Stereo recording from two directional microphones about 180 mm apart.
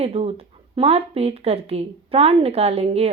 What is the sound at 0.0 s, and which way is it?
A woman's voice, 35° right (ahead or behind).